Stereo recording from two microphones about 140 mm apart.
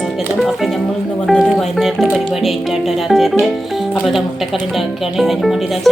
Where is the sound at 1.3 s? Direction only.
Centre (ahead or behind).